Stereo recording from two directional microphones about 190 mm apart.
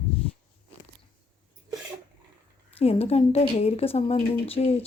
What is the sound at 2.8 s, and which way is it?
Speech, 30° left (ahead or behind).